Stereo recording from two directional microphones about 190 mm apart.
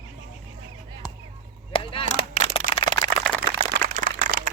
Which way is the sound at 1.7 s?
30° left (ahead or behind).